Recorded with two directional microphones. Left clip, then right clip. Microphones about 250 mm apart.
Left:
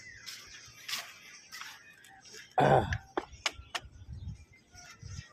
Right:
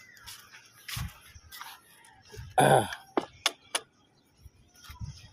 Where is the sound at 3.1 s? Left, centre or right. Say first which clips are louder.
Right 7 dB; right.